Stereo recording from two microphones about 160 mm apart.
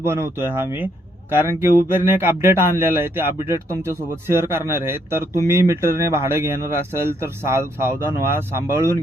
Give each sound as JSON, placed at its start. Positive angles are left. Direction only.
{"t": 0.0, "sound": "a man's voice", "side_deg": -15}